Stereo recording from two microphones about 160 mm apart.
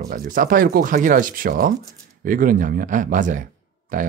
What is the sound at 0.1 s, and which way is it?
Speech, 60° right (ahead or behind).